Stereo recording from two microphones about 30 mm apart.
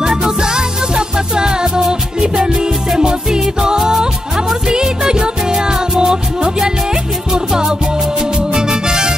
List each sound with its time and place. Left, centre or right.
0.0 s music: right
3.0 s music: centre
8.2 s music: right